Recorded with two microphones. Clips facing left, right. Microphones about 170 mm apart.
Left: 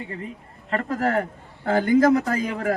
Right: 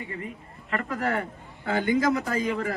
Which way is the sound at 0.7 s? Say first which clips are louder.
Left 5 dB; 40° left (ahead or behind).